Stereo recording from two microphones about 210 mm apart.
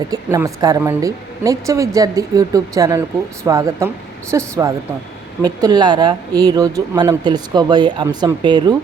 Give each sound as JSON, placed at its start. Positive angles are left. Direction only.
{"t": 0.1, "sound": "speech", "side_deg": -15}